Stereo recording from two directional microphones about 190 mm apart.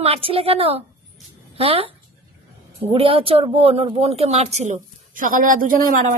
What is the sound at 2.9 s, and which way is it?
Speech, 30° right (ahead or behind).